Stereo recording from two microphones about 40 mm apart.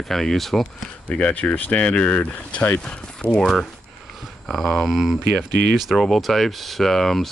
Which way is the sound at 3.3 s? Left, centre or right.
Centre.